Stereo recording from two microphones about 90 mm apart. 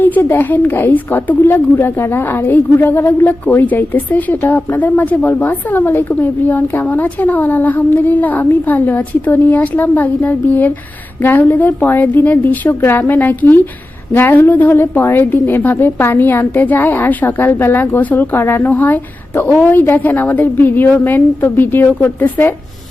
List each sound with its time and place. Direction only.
0.0 s speech: 25° left (ahead or behind)